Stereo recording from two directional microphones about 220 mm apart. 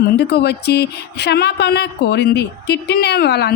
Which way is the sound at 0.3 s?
50° left (ahead or behind).